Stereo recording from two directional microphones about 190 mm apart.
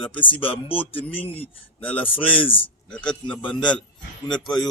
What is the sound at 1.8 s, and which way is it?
Speech, 10° left (ahead or behind).